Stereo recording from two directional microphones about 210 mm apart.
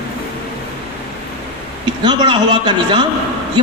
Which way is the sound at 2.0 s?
20° right (ahead or behind).